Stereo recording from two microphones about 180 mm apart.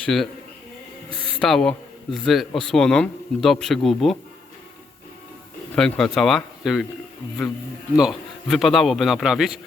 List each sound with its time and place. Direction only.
0.0 s speech: centre (ahead or behind)
1.4 s a man's voice: 5° left (ahead or behind)
5.7 s a man's voice: 5° left (ahead or behind)
7.9 s a man's voice: centre (ahead or behind)